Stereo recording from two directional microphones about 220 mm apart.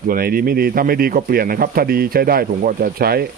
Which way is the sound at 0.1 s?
40° right (ahead or behind).